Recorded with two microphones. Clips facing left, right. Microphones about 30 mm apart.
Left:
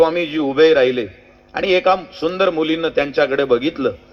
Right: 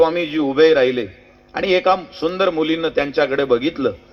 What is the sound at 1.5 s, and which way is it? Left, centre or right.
A man's voice, centre.